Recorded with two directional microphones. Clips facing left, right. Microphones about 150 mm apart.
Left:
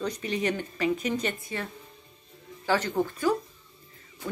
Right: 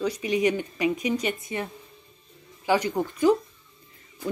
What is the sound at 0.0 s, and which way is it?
Speech, 10° right (ahead or behind).